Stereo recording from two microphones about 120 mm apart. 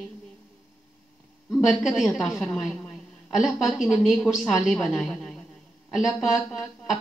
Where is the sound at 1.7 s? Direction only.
Centre (ahead or behind).